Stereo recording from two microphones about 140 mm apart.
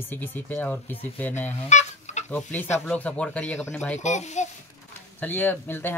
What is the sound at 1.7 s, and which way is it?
Fowl, 55° left (ahead or behind).